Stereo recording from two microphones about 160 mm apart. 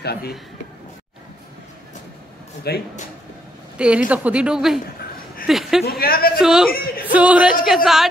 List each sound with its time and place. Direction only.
0.0 s a man's voice: 80° left
2.7 s speech: 90° left
3.7 s a woman's voice: 5° right (ahead or behind)
5.9 s a man's voice: 70° left (ahead or behind)
6.4 s a woman's voice: 5° right (ahead or behind)